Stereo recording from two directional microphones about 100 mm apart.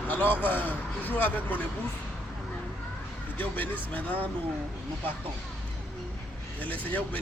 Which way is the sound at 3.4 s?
15° left (ahead or behind).